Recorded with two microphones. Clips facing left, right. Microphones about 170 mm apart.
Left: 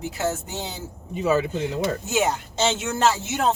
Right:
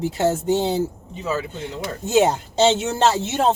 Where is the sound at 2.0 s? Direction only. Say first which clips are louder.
Right 6 dB; 30° right (ahead or behind).